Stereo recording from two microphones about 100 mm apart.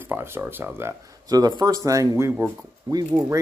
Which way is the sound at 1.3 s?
40° right (ahead or behind).